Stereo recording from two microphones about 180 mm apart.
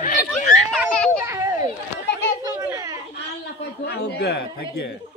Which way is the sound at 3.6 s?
65° left (ahead or behind).